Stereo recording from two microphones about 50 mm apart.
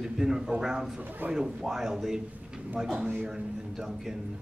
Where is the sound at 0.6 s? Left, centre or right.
Centre.